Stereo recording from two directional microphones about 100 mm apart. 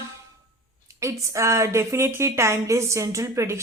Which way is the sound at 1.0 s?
30° right (ahead or behind).